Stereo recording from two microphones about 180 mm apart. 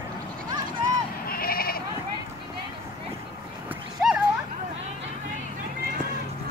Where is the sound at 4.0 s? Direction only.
5° right (ahead or behind).